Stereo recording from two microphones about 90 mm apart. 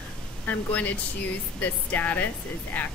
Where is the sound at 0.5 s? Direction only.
20° left (ahead or behind).